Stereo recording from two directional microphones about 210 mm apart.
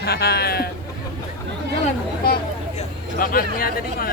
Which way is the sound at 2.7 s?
45° left (ahead or behind).